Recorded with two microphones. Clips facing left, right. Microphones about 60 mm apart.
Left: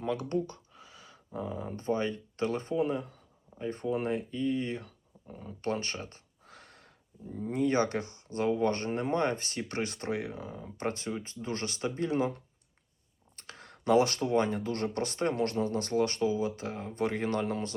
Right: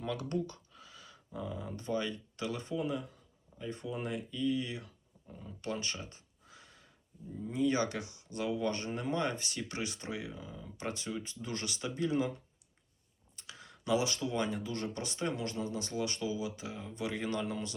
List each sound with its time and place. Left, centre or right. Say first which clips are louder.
0.0 s speech: left 4 dB; left
5.3 s a sound: left 6 dB; left
7.3 s speech: left 3 dB; left
10.6 s speech: left 6 dB; left
13.3 s speech: left 3 dB; left